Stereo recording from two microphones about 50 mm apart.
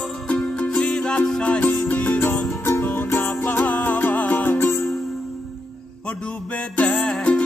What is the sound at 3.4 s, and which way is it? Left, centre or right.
Music, left.